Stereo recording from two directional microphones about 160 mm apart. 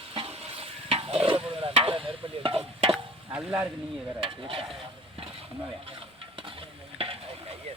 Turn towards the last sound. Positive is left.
turn(degrees=-35)  # may be behind; listen again after turning